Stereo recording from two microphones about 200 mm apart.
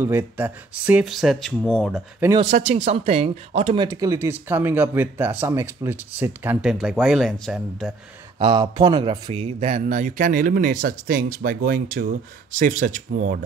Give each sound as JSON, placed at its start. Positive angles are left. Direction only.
{"t": 0.0, "sound": "speech", "side_deg": -10}
{"t": 2.3, "sound": "speech", "side_deg": -30}
{"t": 8.4, "sound": "a man's voice", "side_deg": -25}